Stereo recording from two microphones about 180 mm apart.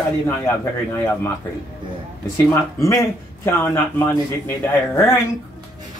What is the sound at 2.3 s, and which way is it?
Speech, 15° left (ahead or behind).